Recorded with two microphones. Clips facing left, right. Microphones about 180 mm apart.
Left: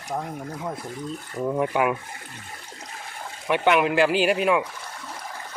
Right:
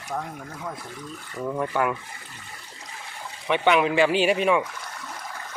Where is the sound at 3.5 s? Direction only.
Centre (ahead or behind).